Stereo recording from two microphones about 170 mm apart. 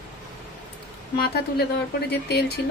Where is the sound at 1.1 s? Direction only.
65° left (ahead or behind).